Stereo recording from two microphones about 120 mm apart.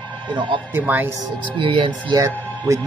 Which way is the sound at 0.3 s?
40° right (ahead or behind).